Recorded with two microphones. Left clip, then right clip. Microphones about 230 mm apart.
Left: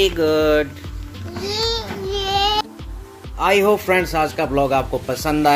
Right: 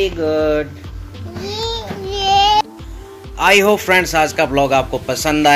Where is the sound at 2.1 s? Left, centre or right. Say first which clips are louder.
Right 7 dB; right.